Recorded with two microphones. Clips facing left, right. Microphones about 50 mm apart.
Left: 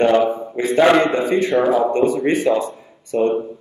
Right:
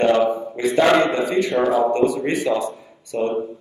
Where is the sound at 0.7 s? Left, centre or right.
Centre.